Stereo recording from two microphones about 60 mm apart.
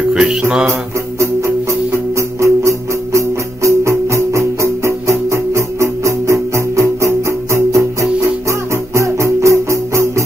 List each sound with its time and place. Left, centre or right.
0.1 s music: centre
2.1 s music: right